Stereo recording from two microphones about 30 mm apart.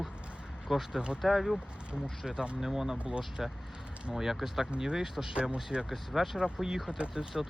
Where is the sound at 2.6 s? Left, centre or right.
Centre.